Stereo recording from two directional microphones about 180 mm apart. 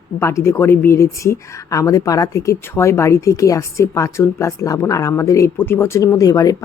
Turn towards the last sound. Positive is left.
turn(degrees=20)  # may be behind; listen again after turning